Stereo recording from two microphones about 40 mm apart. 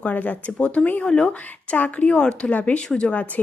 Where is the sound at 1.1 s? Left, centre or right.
Left.